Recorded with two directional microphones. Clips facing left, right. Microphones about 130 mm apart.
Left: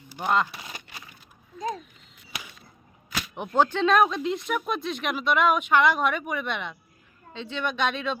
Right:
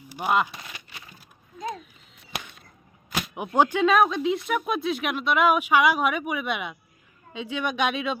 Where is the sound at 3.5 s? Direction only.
15° right (ahead or behind).